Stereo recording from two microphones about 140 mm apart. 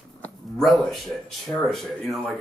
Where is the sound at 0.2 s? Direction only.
Centre (ahead or behind).